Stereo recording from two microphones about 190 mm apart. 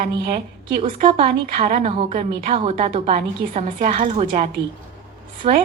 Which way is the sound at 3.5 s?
45° right (ahead or behind).